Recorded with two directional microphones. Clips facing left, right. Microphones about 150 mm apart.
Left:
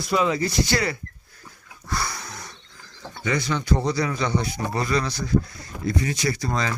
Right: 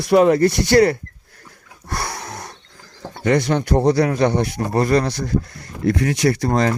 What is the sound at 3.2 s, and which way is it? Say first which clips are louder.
Speech: right 8 dB; 60° right (ahead or behind).